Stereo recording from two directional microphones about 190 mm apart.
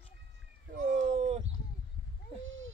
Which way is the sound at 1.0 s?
35° right (ahead or behind).